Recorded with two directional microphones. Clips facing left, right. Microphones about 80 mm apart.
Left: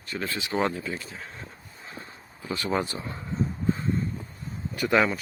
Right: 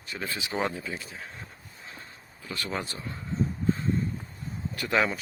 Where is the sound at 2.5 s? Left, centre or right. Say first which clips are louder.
Left 6 dB; centre.